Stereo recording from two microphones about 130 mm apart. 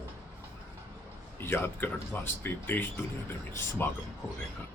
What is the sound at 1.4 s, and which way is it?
Speech, 15° left (ahead or behind).